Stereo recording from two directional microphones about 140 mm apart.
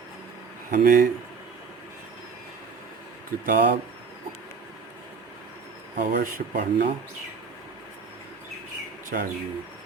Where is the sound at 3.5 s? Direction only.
90° right.